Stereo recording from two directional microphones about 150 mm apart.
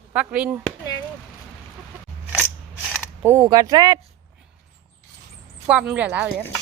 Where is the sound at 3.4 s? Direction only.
25° right (ahead or behind).